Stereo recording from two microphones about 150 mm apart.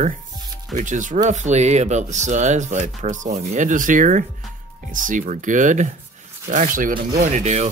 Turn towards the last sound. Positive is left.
turn(degrees=-50)  # may be behind; listen again after turning